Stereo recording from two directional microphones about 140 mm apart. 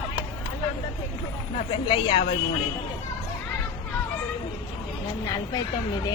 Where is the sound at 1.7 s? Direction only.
40° left (ahead or behind).